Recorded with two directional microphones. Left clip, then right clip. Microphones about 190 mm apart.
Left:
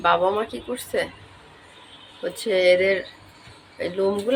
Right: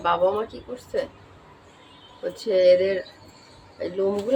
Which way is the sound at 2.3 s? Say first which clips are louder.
Right 1 dB; 15° left (ahead or behind).